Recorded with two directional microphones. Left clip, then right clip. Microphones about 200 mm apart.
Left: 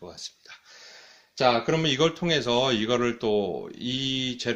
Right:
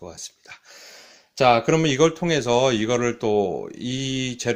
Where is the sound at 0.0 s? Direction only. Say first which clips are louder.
Right 2 dB; 35° right (ahead or behind).